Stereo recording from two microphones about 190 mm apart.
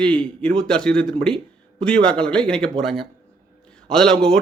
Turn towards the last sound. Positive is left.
turn(degrees=5)  # may be behind; listen again after turning